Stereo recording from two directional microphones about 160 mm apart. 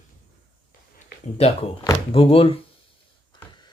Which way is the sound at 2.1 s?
35° left (ahead or behind).